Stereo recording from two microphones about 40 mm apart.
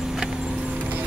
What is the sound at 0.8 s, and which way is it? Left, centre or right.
Clip-clop, right.